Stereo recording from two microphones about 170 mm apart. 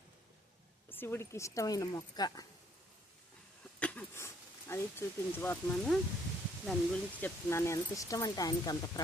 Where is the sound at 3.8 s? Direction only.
10° left (ahead or behind).